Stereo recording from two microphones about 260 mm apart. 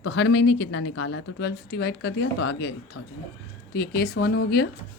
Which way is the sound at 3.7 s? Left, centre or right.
Left.